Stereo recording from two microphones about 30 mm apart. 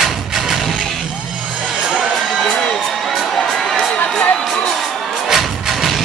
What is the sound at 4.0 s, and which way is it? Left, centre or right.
Crowd, left.